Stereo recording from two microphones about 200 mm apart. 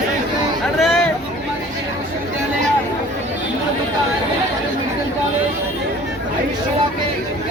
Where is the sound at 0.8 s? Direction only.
Centre (ahead or behind).